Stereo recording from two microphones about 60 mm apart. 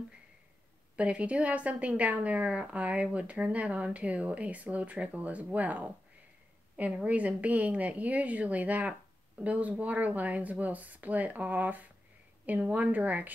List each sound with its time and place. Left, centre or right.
0.9 s a woman's voice: right
7.1 s a woman's voice: right